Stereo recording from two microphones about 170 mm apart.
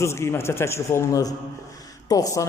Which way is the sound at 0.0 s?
15° left (ahead or behind).